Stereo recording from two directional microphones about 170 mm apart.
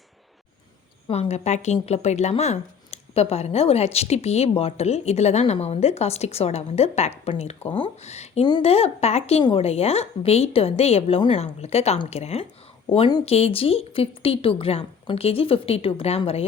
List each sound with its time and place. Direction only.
1.0 s a woman's voice: 35° left (ahead or behind)